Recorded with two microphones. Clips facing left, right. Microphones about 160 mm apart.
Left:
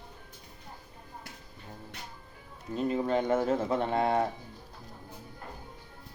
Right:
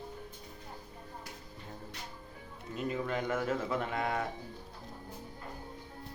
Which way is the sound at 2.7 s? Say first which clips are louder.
Left 6 dB; 30° left (ahead or behind).